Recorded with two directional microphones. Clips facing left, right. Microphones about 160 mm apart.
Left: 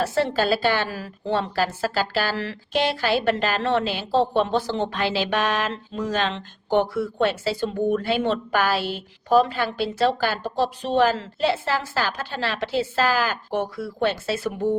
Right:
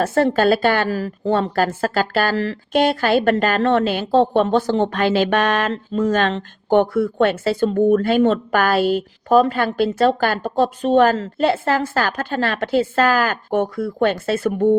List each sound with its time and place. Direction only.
0.0 s a woman's voice: 50° right (ahead or behind)